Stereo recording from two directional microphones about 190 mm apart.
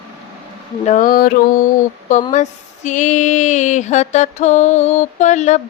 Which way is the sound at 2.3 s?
40° left (ahead or behind).